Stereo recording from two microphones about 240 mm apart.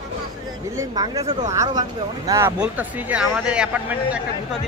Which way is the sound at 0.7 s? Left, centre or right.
Centre.